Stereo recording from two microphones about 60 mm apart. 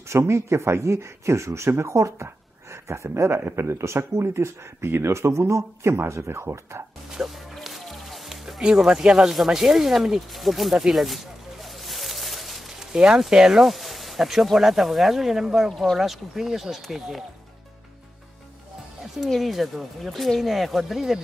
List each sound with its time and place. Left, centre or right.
0.1 s speech: right
7.1 s music: centre
8.5 s speech: centre
13.7 s speech: centre
19.2 s speech: centre